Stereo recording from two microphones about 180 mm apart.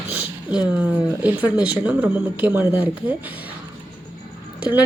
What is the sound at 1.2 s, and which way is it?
A woman's voice, 5° right (ahead or behind).